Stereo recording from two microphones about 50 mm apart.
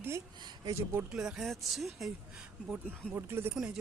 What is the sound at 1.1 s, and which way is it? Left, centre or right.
Speech, centre.